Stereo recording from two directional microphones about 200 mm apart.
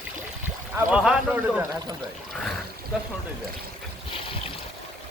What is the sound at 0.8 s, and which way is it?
Speech, 5° right (ahead or behind).